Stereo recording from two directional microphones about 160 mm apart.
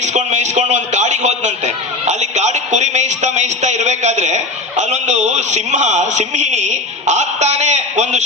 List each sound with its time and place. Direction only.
0.0 s a man's voice: 45° right (ahead or behind)